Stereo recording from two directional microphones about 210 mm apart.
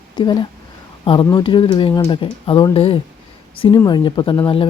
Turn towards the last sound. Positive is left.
turn(degrees=25)  # may be behind; listen again after turning